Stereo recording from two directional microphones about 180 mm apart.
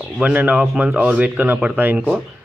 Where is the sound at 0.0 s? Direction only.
10° right (ahead or behind).